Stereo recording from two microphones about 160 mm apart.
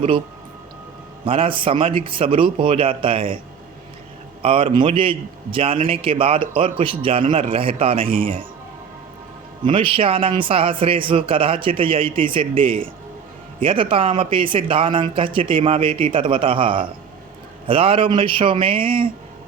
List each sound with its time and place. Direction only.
1.2 s a man's voice: 35° right (ahead or behind)
4.4 s a man's voice: 35° right (ahead or behind)
9.6 s a man's voice: 35° right (ahead or behind)